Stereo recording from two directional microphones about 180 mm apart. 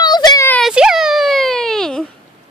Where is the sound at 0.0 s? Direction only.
20° left (ahead or behind).